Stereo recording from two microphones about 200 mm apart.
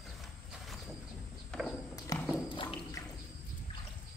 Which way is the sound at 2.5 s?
20° left (ahead or behind).